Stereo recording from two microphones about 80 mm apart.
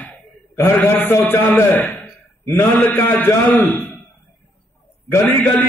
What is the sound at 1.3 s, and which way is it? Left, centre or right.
A man's voice, left.